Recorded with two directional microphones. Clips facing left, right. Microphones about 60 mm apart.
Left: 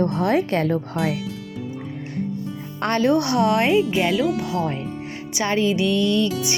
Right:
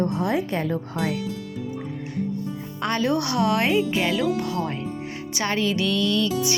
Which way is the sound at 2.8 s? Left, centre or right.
Left.